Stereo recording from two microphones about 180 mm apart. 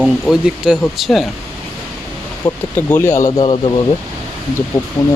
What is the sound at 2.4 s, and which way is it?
Speech, 10° left (ahead or behind).